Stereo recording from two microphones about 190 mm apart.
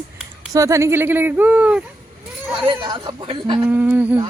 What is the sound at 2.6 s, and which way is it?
Speech, 25° right (ahead or behind).